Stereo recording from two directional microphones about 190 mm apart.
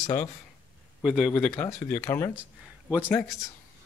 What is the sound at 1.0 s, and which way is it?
Speech, 5° right (ahead or behind).